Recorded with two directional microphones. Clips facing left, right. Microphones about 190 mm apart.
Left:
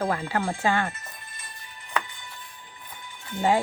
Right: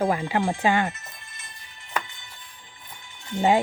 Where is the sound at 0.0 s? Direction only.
15° right (ahead or behind).